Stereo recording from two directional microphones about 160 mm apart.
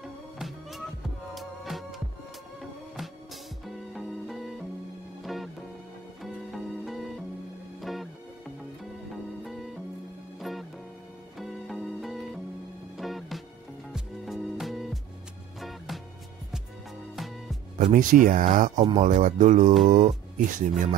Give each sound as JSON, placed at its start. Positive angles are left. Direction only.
{"t": 0.0, "sound": "music", "side_deg": 0}
{"t": 3.6, "sound": "music", "side_deg": 0}
{"t": 9.4, "sound": "music", "side_deg": 0}
{"t": 17.1, "sound": "music", "side_deg": 0}
{"t": 17.9, "sound": "speech", "side_deg": -55}